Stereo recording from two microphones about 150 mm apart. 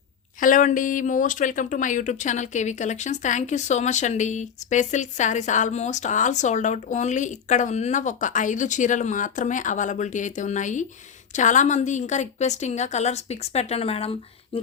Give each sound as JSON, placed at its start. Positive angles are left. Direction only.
{"t": 0.3, "sound": "a woman's voice", "side_deg": 60}